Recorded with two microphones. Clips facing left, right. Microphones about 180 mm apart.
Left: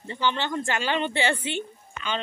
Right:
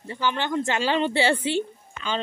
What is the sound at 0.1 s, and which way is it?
A woman's voice, 10° right (ahead or behind).